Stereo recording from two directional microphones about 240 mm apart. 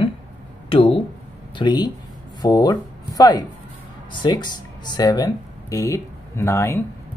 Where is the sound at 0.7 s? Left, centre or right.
Left.